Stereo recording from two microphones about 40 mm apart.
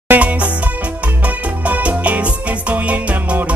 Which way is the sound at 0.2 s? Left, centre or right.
Right.